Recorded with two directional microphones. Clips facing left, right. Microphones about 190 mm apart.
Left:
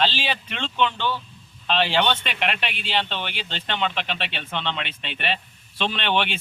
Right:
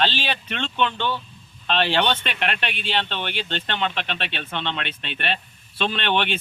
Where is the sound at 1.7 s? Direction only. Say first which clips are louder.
Even; 10° left (ahead or behind).